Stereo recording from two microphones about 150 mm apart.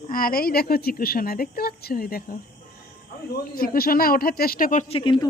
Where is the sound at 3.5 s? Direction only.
80° left; by 4.9 s 65° left (ahead or behind).